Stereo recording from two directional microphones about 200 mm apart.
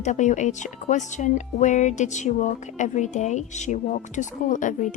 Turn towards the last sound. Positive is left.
turn(degrees=40)  # may be behind; listen again after turning